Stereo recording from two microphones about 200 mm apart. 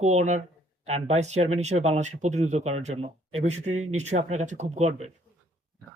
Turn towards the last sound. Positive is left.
turn(degrees=-35)  # may be behind; listen again after turning